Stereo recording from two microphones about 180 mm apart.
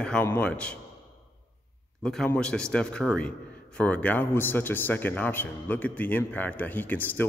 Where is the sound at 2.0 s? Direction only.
5° left (ahead or behind).